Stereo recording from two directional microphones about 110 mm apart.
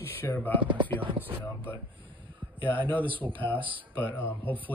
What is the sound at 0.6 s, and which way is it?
Speech, 50° right (ahead or behind).